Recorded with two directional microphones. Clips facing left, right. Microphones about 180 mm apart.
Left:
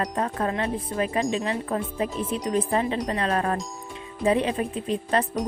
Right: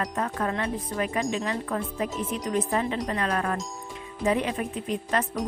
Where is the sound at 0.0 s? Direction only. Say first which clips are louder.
Left 2 dB; 30° left (ahead or behind).